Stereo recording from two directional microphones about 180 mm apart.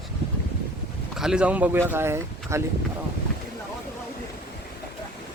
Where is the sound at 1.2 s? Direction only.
5° right (ahead or behind).